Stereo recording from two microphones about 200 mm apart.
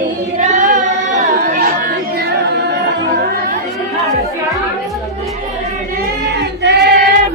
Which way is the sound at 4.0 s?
15° left (ahead or behind).